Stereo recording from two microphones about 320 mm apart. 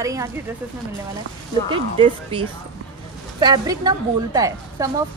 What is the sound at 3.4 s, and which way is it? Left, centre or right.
Speech, centre.